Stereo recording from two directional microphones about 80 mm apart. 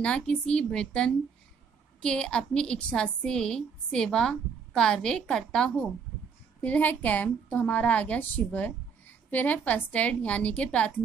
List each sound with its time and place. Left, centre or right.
0.0 s a woman's voice: centre
6.6 s a woman's voice: centre